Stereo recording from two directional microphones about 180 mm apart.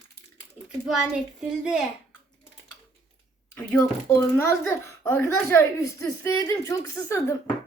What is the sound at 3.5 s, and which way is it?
A child's voice, 15° left (ahead or behind).